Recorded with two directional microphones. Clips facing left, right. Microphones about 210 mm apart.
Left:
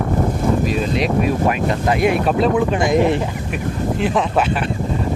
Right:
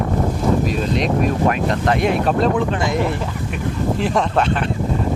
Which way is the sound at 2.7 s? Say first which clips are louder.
Left 5 dB; 15° left (ahead or behind).